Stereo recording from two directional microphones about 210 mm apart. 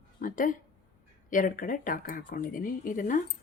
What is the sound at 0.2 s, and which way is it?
Speech, 40° left (ahead or behind).